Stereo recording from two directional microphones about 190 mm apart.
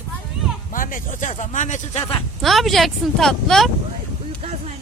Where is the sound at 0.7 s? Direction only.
45° left (ahead or behind).